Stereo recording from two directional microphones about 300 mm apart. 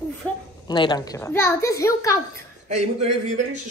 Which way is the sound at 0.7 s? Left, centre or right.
Centre.